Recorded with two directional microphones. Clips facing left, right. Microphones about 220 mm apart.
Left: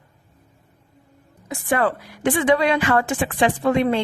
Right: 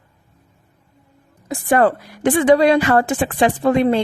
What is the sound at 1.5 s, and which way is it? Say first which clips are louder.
Speech: right 5 dB; 40° right (ahead or behind).